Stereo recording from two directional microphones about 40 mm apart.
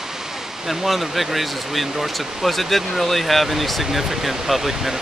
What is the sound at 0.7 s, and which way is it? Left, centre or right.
Speech, centre.